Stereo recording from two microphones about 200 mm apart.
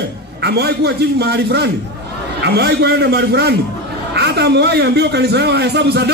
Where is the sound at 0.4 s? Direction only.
55° right (ahead or behind).